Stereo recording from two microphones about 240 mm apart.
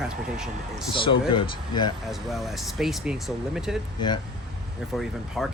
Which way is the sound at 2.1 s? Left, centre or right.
Centre.